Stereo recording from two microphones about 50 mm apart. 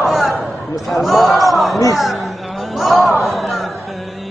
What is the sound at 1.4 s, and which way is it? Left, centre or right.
Speech, centre.